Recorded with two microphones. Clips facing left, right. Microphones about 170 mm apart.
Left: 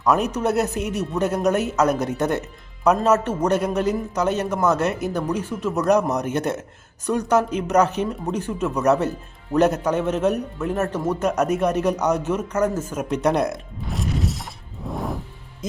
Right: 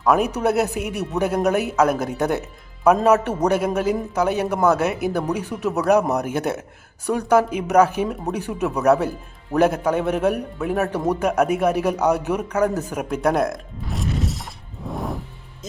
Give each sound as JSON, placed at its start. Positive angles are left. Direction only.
{"t": 0.3, "sound": "speech", "side_deg": -10}
{"t": 0.7, "sound": "a man's voice", "side_deg": -60}
{"t": 1.1, "sound": "speech", "side_deg": -10}
{"t": 13.1, "sound": "music", "side_deg": -5}